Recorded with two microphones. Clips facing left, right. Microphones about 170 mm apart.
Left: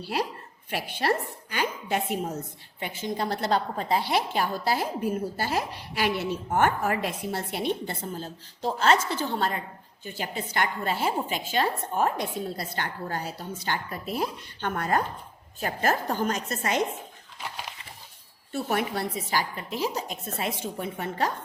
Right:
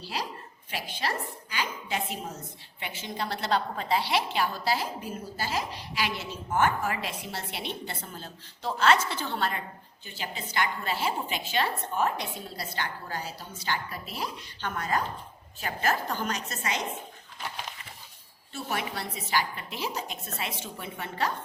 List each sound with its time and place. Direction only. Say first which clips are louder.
0.0 s a woman's voice: left 5 dB; 55° left (ahead or behind)
18.5 s a woman's voice: left 6 dB; 50° left (ahead or behind)